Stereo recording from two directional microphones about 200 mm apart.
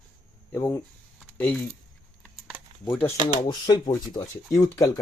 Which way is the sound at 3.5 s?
20° left (ahead or behind).